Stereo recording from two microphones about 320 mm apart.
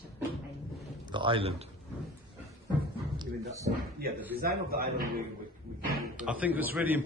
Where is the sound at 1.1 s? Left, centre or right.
Centre.